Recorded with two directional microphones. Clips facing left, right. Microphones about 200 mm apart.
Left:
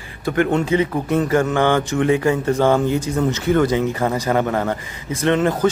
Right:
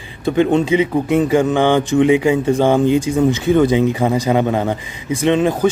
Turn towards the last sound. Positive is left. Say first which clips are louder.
# right 3 dB
turn(degrees=-15)  # may be behind; listen again after turning